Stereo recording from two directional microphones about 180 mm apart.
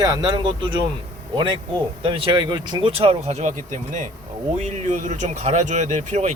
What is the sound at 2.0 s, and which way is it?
Speech, 30° right (ahead or behind).